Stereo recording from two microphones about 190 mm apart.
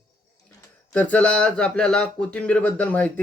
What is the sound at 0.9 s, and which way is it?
Speech, 10° left (ahead or behind).